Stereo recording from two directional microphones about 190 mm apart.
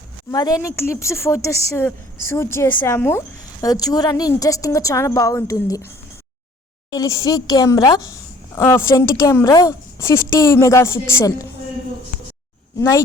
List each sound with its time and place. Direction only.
0.3 s a woman's voice: 20° left (ahead or behind)
6.9 s a woman's voice: 20° left (ahead or behind)